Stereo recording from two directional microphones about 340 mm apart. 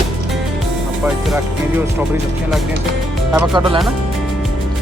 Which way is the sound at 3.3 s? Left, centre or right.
Centre.